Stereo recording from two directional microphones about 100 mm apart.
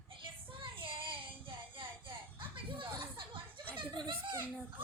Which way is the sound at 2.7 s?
60° right (ahead or behind).